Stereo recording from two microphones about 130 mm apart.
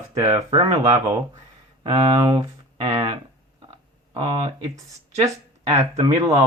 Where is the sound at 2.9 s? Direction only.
40° right (ahead or behind).